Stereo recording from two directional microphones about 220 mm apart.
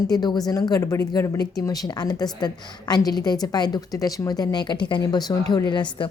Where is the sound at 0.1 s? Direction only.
20° left (ahead or behind).